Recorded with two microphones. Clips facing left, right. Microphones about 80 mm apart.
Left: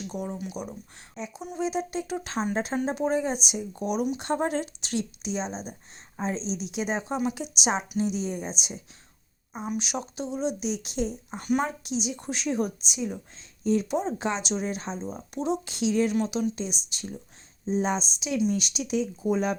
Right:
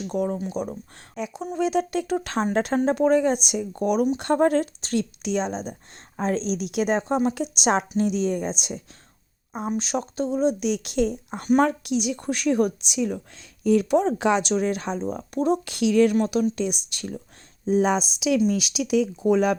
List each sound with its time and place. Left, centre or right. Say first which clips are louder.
0.1 s speech: right 11 dB; right
1.4 s speech: right 6 dB; right
6.1 s speech: right 6 dB; right
7.2 s speech: right 5 dB; right
7.6 s speech: right 5 dB; right
9.6 s speech: right 5 dB; right
16.1 s speech: right 5 dB; right
17.7 s speech: right 6 dB; right